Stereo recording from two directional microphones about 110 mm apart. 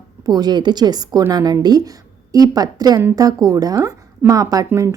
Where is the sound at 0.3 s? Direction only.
40° right (ahead or behind).